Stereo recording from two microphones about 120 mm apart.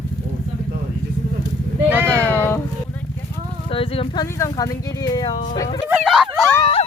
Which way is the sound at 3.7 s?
50° left (ahead or behind).